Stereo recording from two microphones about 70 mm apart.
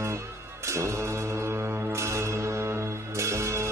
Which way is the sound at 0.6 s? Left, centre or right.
Right.